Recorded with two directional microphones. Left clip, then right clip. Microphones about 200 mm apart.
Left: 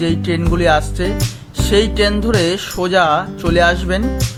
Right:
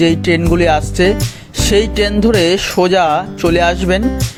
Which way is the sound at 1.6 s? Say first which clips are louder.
Right 1 dB; 30° right (ahead or behind).